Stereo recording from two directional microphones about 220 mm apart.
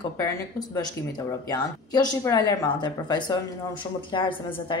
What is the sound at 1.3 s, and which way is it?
A woman's voice, 15° left (ahead or behind).